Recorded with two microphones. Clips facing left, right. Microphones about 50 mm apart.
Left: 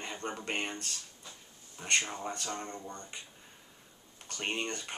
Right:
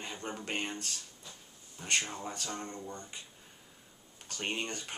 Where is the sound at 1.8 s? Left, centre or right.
Centre.